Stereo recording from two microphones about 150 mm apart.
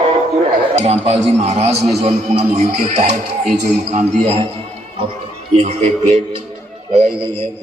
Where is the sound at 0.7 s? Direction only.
40° right (ahead or behind).